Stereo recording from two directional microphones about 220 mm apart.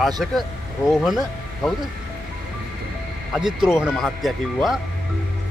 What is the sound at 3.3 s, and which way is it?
Speech, centre (ahead or behind).